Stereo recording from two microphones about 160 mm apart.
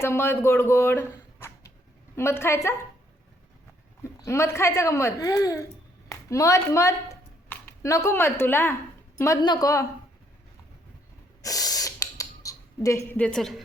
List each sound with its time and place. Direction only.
0.0 s a woman's voice: 15° left (ahead or behind)
4.0 s a woman's voice: 15° left (ahead or behind)
11.4 s a sound: 20° left (ahead or behind); by 13.6 s 5° left (ahead or behind)